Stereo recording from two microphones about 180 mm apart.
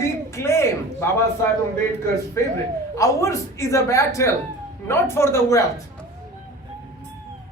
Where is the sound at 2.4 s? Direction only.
15° left (ahead or behind).